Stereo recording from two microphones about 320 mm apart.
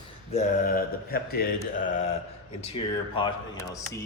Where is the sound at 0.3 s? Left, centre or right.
Left.